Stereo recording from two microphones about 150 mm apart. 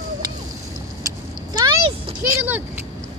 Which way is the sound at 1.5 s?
25° right (ahead or behind).